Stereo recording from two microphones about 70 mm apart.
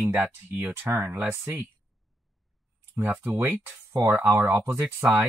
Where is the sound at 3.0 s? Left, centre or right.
Right.